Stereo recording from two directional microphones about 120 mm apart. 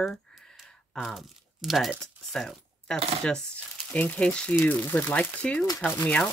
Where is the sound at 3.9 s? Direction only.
10° left (ahead or behind).